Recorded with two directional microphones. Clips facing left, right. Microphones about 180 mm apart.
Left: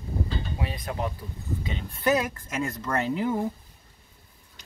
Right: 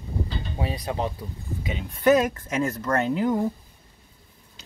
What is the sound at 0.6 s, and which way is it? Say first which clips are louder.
Speech: right 6 dB; 30° right (ahead or behind).